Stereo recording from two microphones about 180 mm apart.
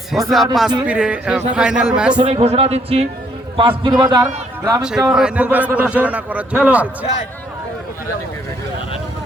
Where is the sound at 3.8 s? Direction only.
25° right (ahead or behind).